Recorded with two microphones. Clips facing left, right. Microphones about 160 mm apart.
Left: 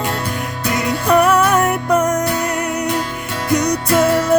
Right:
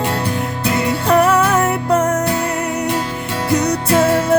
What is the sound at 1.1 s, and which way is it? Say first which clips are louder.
Music: left 1 dB; 25° right (ahead or behind).